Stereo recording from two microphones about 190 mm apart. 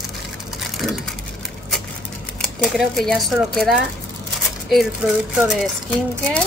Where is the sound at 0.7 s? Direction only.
Centre (ahead or behind).